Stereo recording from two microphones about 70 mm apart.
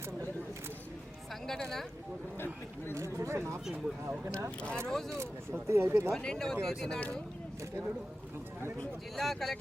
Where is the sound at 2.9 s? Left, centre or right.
Right.